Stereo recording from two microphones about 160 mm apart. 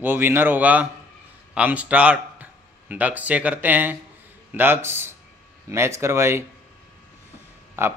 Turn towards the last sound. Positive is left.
turn(degrees=-15)  # may be behind; listen again after turning